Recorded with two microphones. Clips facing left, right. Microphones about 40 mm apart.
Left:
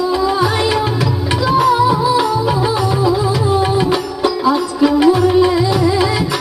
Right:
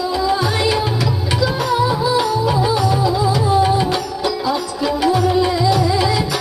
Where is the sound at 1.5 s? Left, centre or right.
Centre.